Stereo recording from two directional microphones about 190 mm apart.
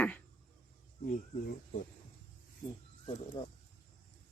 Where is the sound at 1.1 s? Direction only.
45° left (ahead or behind).